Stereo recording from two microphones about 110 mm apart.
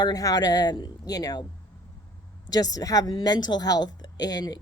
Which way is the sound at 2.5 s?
35° left (ahead or behind).